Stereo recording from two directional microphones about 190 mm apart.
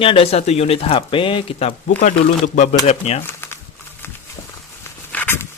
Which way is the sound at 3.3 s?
10° left (ahead or behind).